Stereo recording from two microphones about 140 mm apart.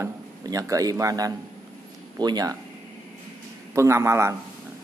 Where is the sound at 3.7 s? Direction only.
20° right (ahead or behind).